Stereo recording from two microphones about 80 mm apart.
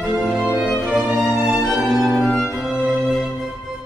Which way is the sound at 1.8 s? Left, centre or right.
Centre.